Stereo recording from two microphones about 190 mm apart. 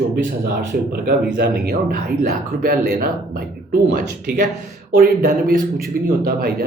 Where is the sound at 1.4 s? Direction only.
55° right (ahead or behind).